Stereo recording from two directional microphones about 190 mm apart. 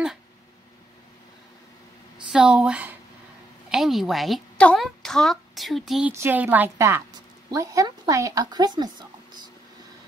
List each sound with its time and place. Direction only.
2.3 s a woman's voice: 5° right (ahead or behind); by 9.1 s 20° right (ahead or behind)